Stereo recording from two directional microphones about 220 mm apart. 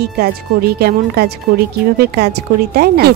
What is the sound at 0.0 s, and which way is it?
A woman's voice, 45° right (ahead or behind).